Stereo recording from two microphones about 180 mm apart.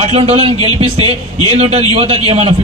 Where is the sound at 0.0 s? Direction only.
35° right (ahead or behind).